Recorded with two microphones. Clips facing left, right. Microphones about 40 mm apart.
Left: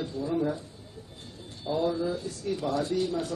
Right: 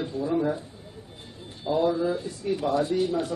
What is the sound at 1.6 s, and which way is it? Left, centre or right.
Speech, right.